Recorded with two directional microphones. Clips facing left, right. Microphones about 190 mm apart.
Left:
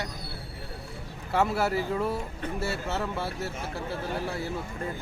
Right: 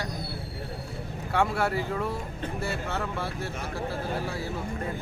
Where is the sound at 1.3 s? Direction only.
5° left (ahead or behind).